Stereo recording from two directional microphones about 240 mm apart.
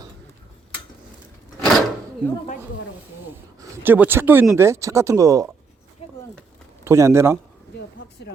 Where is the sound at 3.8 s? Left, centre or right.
Centre.